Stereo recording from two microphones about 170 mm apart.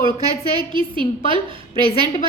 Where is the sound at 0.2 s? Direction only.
25° right (ahead or behind).